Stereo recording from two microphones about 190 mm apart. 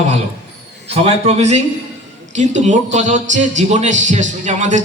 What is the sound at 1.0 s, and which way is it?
A man's voice, 35° right (ahead or behind).